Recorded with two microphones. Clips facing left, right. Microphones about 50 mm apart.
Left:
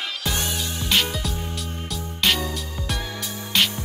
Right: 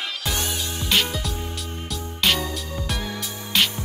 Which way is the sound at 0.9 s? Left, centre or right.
Centre.